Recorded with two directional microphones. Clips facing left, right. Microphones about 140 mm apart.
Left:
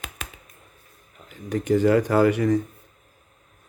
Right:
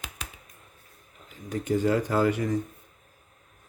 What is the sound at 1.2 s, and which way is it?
Speech, 75° left (ahead or behind).